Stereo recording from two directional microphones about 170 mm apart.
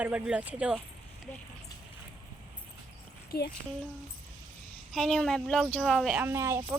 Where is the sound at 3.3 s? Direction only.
70° left (ahead or behind).